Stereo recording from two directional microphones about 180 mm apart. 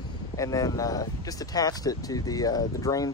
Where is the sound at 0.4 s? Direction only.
20° left (ahead or behind).